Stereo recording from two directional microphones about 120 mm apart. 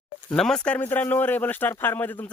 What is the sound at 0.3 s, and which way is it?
Speech, 5° left (ahead or behind).